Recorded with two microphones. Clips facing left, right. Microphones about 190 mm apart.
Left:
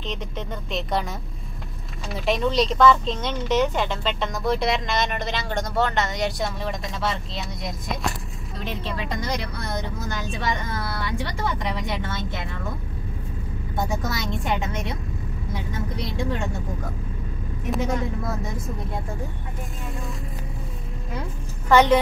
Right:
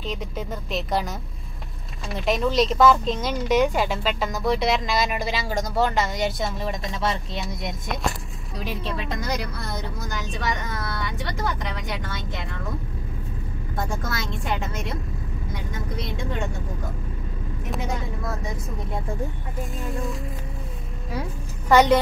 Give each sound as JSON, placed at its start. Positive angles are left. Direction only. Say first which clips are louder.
{"t": 0.0, "sound": "speech", "louder": "right 1 dB", "side_deg": -5}
{"t": 2.1, "sound": "speech", "louder": "even", "side_deg": 0}
{"t": 10.8, "sound": "speech", "louder": "left 2 dB", "side_deg": 0}
{"t": 13.7, "sound": "speech", "louder": "left 2 dB", "side_deg": 0}
{"t": 17.6, "sound": "speech", "louder": "left 5 dB", "side_deg": 0}
{"t": 21.6, "sound": "a woman's voice", "louder": "even", "side_deg": -10}